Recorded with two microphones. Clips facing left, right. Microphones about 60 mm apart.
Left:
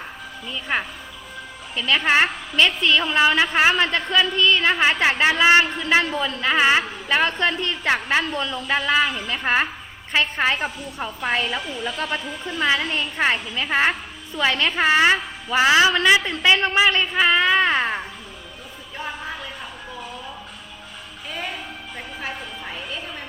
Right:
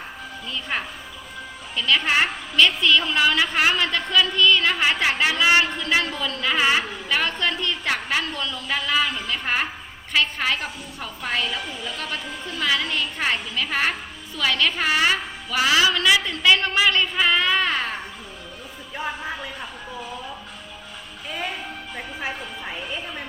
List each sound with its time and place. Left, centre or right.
0.4 s speech: centre
1.7 s a woman's voice: left
18.9 s a sound: centre
21.2 s music: centre